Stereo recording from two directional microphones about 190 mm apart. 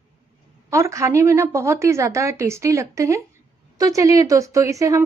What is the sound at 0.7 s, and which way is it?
A woman's voice, 15° right (ahead or behind).